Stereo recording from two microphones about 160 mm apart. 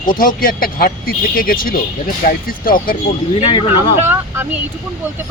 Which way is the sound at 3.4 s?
35° left (ahead or behind).